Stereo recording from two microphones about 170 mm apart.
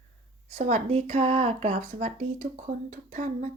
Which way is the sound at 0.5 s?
40° right (ahead or behind).